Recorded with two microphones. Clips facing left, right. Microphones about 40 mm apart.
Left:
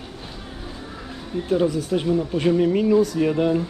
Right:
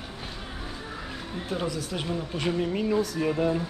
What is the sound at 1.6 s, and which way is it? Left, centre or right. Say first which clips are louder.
Speech: left 9 dB; left.